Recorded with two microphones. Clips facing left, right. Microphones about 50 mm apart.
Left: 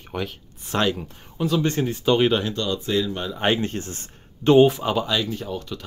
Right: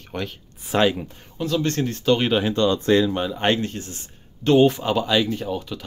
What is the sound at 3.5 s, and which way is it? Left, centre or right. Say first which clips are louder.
Speech: left 1 dB; left.